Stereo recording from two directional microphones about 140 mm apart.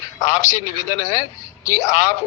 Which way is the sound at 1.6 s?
25° left (ahead or behind).